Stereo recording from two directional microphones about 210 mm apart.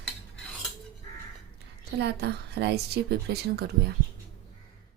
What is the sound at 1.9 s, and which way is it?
A woman's voice, 50° right (ahead or behind).